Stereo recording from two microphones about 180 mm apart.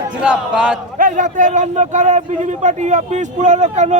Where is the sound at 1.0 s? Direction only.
45° right (ahead or behind).